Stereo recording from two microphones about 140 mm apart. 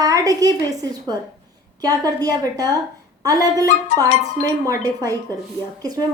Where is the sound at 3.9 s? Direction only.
55° left (ahead or behind).